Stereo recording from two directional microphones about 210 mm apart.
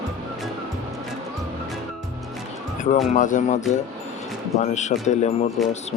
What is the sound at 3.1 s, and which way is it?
Speech, 35° left (ahead or behind).